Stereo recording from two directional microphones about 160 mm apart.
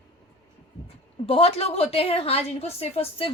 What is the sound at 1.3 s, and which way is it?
A woman's voice, 35° left (ahead or behind).